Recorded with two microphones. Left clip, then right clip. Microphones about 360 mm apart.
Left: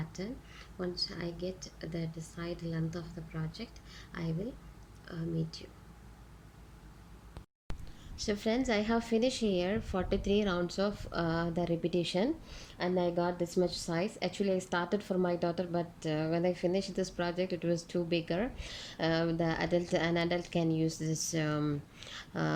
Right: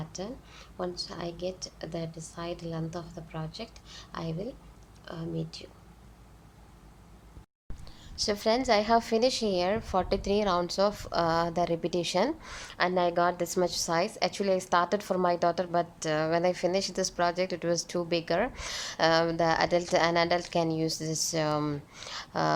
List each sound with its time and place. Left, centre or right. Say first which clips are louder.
0.8 s speech: right 2 dB; centre
8.1 s speech: right 6 dB; centre